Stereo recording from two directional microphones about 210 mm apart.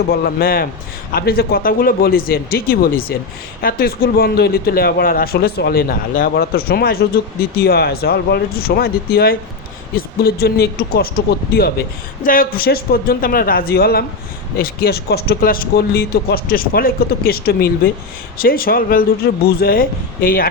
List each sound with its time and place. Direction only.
0.1 s a man's voice: 45° left (ahead or behind)